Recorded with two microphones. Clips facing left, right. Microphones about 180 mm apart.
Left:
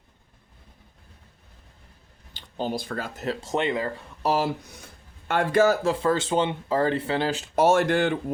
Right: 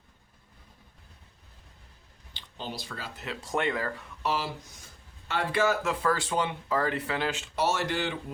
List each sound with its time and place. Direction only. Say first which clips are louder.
2.3 s speech: left 10 dB; 45° left (ahead or behind)
3.4 s speech: left 2 dB; 20° left (ahead or behind)
4.2 s speech: left 7 dB; 45° left (ahead or behind); by 4.9 s 65° left (ahead or behind)
5.3 s speech: left 6 dB; 45° left (ahead or behind)